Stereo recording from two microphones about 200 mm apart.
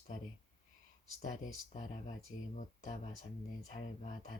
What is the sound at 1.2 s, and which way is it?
Speech, 35° left (ahead or behind).